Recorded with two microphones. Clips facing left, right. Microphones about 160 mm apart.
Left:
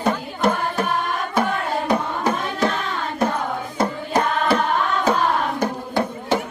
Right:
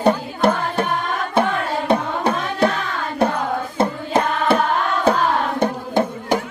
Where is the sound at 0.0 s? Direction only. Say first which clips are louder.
Right 4 dB; 30° right (ahead or behind).